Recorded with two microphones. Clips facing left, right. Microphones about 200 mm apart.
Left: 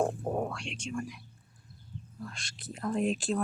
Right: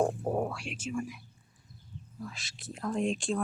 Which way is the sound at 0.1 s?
5° right (ahead or behind).